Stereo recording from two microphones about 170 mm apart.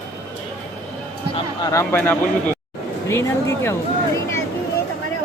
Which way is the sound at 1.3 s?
20° left (ahead or behind).